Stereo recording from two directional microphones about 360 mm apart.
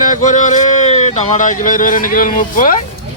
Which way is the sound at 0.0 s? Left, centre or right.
Left.